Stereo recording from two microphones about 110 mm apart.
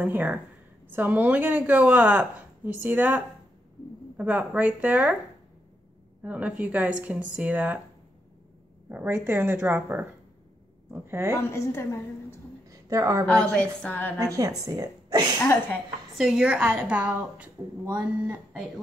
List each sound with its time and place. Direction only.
0.0 s speech: 15° right (ahead or behind)
6.2 s speech: 10° right (ahead or behind)
8.8 s speech: 15° right (ahead or behind)
11.5 s a woman's voice: 25° left (ahead or behind)
12.6 s a sound: 30° right (ahead or behind)
13.2 s a woman's voice: 5° left (ahead or behind)
14.3 s a woman's voice: 30° right (ahead or behind)
16.2 s speech: 5° right (ahead or behind)